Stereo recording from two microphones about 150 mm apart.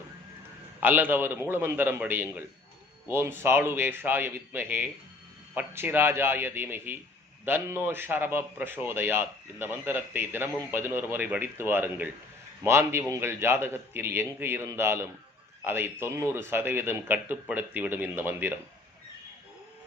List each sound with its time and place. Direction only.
0.8 s a man's voice: 10° right (ahead or behind)